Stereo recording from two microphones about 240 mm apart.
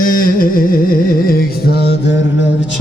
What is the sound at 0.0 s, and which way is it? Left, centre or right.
Music, left.